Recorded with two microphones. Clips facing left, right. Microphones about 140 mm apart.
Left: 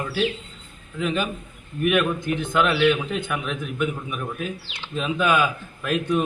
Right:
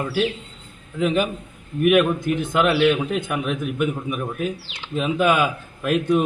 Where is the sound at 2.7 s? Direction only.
40° right (ahead or behind).